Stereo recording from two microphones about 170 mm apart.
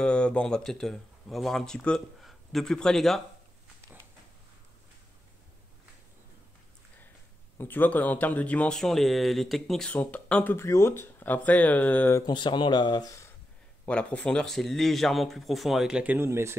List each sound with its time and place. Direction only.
0.0 s speech: 5° left (ahead or behind)
7.5 s speech: 10° left (ahead or behind)
12.3 s speech: 25° left (ahead or behind)
13.8 s speech: 5° left (ahead or behind); by 16.5 s 15° right (ahead or behind)